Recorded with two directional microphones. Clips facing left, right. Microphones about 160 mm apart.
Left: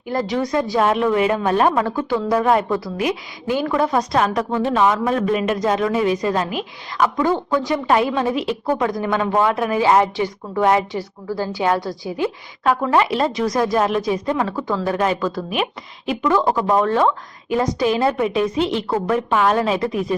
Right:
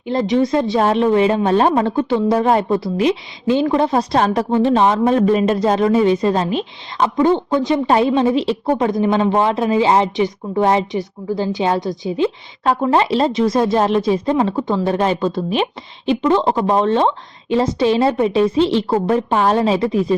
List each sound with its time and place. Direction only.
0.0 s speech: 20° right (ahead or behind)